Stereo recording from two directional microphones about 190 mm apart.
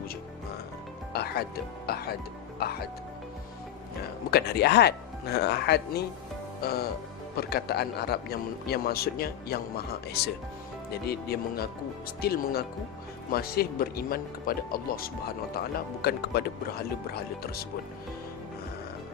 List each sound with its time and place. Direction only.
1.1 s music: 55° left (ahead or behind)
1.9 s a man's voice: 55° left (ahead or behind)
4.3 s a man's voice: 60° left (ahead or behind)
6.6 s music: 55° left (ahead or behind)
7.3 s a man's voice: 55° left (ahead or behind)